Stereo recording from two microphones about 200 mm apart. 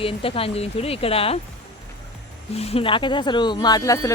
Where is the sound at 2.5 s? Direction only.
30° left (ahead or behind).